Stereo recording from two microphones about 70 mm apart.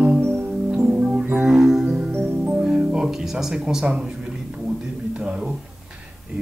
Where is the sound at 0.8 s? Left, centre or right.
Centre.